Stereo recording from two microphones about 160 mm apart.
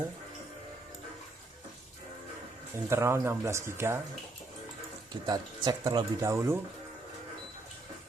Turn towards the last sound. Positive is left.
turn(degrees=-15)  # may be behind; listen again after turning